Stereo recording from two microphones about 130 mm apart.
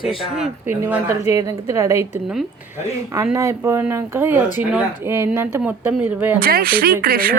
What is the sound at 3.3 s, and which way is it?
Speech, 20° right (ahead or behind).